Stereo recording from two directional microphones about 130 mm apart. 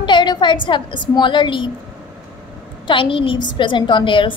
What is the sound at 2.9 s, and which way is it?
A woman's voice, 40° left (ahead or behind).